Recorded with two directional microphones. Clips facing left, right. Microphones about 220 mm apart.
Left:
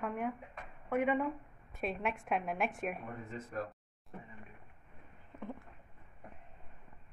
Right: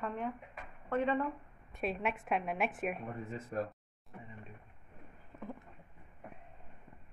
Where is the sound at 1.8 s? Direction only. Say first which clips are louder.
Right 1 dB; centre (ahead or behind).